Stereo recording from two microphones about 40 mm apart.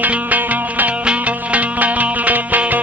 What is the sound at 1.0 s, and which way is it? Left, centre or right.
Music, right.